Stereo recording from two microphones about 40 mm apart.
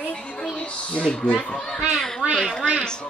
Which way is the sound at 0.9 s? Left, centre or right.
Left.